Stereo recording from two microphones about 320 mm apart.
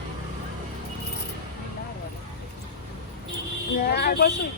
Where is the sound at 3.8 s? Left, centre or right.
Left.